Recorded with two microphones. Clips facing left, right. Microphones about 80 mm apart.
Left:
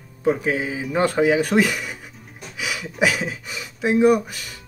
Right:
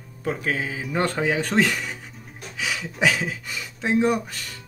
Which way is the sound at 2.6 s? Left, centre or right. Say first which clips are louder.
Left 1 dB; centre.